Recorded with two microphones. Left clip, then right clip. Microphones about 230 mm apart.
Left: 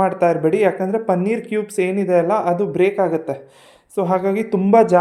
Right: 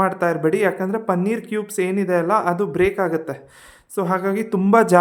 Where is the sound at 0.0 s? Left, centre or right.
Centre.